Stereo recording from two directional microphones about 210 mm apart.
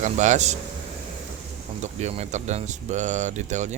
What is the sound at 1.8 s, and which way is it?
Speech, 35° right (ahead or behind).